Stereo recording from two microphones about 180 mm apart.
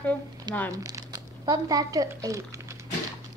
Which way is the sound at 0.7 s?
20° right (ahead or behind).